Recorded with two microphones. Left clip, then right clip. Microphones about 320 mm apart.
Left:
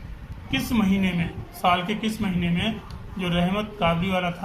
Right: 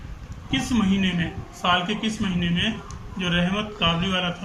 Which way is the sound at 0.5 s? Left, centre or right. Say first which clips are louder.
Right 1 dB; centre.